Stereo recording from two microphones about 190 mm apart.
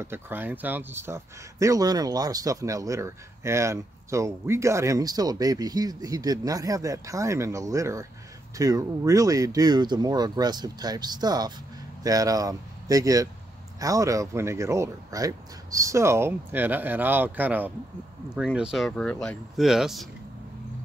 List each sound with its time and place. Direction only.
0.0 s speech: 10° right (ahead or behind)